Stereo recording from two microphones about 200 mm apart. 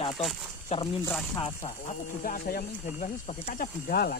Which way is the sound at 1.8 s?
45° left (ahead or behind).